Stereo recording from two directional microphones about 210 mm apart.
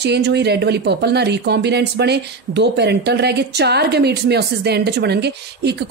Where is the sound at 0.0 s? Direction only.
55° right (ahead or behind).